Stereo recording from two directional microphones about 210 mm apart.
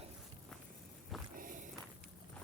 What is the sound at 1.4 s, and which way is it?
Walk, 40° right (ahead or behind).